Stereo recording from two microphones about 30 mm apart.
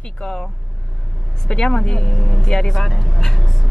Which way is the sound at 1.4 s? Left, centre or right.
Left.